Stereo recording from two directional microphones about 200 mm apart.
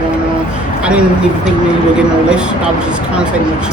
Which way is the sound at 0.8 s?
5° right (ahead or behind).